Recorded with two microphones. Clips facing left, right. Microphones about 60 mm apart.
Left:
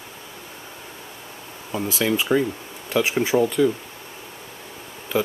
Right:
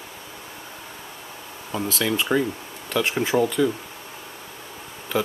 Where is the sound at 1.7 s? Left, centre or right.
Centre.